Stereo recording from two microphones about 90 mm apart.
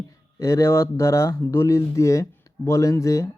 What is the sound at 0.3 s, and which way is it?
A man's voice, 35° left (ahead or behind).